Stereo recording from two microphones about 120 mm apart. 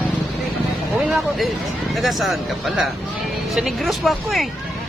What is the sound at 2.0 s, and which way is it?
Speech, centre (ahead or behind).